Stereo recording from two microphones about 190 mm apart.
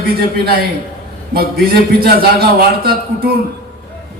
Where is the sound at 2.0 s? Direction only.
50° right (ahead or behind).